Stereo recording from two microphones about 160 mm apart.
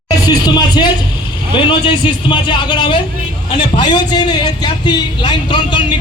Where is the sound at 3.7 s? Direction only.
30° left (ahead or behind).